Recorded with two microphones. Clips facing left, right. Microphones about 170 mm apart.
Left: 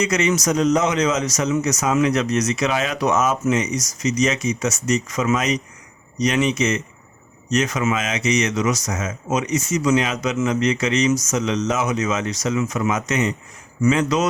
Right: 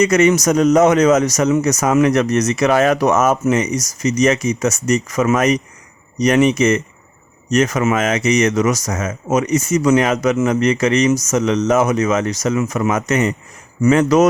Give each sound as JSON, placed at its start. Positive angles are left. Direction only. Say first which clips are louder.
{"t": 0.0, "sound": "speech", "louder": "right 7 dB", "side_deg": -55}